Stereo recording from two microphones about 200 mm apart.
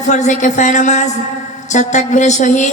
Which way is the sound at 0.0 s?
35° left (ahead or behind).